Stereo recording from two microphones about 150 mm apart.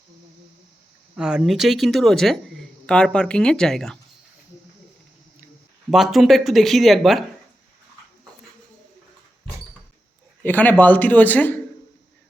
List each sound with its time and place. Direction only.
1.1 s speech: 5° right (ahead or behind)
5.9 s speech: centre (ahead or behind)
10.4 s speech: 10° left (ahead or behind)